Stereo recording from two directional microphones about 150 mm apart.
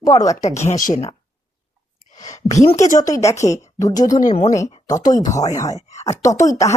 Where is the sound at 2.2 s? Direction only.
50° left (ahead or behind).